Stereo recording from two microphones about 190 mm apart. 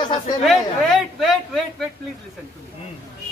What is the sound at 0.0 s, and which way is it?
Chatter, 25° left (ahead or behind).